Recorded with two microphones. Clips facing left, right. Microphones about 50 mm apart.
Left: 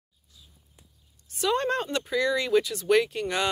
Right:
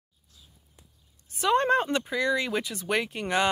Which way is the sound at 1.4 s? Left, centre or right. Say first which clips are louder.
Right 3 dB; centre.